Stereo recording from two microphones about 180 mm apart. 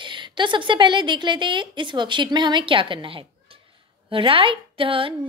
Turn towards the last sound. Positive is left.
turn(degrees=-30)  # may be behind; listen again after turning